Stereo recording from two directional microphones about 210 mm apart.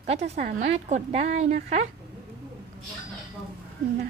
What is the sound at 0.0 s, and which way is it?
A woman's voice, 30° right (ahead or behind).